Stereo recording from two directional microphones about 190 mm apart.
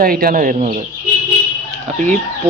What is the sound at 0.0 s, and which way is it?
Speech, 50° right (ahead or behind).